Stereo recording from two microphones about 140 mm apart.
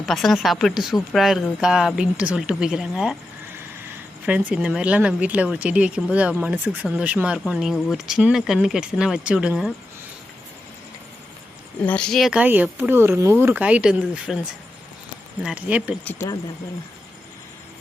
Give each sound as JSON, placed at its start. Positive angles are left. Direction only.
{"t": 0.0, "sound": "speech", "side_deg": 0}
{"t": 4.3, "sound": "speech", "side_deg": -10}
{"t": 11.8, "sound": "speech", "side_deg": 10}
{"t": 15.4, "sound": "speech", "side_deg": -10}
{"t": 16.0, "sound": "speech", "side_deg": 20}